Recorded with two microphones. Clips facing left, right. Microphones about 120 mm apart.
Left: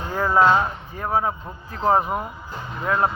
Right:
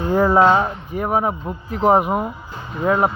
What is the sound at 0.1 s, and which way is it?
Speech, 30° right (ahead or behind).